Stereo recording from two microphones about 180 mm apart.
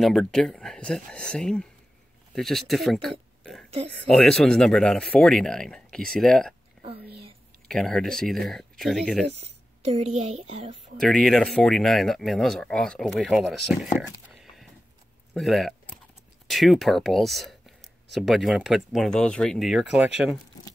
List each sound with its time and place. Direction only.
0.0 s speech: centre (ahead or behind)
6.8 s whispering: 5° left (ahead or behind)
7.6 s speech: centre (ahead or behind)
9.4 s speech: 35° right (ahead or behind)
11.0 s speech: centre (ahead or behind)
14.3 s a sound: centre (ahead or behind)
15.3 s speech: centre (ahead or behind)